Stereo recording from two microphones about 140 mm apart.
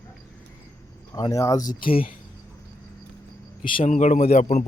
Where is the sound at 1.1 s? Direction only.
25° left (ahead or behind); by 2.0 s 40° left (ahead or behind).